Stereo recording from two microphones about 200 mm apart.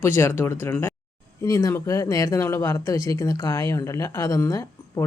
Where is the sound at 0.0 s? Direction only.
10° left (ahead or behind).